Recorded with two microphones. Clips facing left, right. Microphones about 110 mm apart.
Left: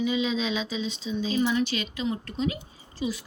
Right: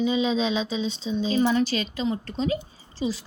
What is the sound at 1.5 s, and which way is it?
Speech, 35° right (ahead or behind).